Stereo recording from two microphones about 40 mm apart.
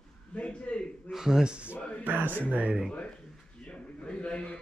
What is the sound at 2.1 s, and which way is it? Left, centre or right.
Speech, right.